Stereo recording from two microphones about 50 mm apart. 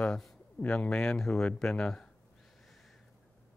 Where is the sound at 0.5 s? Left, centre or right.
Left.